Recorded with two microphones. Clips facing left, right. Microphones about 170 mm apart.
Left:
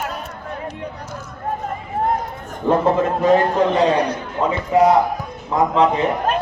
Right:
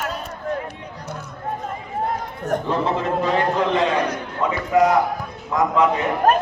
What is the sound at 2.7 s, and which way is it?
A man's voice, 45° left (ahead or behind).